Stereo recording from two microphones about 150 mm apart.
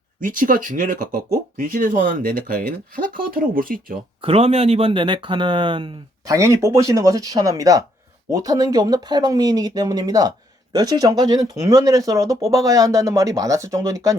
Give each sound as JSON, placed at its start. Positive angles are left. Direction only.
{"t": 0.2, "sound": "speech", "side_deg": -65}
{"t": 4.2, "sound": "speech", "side_deg": -40}
{"t": 6.3, "sound": "speech", "side_deg": -20}